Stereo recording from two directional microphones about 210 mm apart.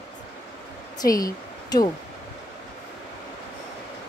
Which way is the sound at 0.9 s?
15° left (ahead or behind).